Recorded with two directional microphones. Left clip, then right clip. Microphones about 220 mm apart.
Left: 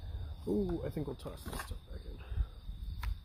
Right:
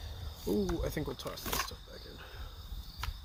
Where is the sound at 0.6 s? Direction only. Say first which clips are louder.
Right 3 dB; 10° right (ahead or behind).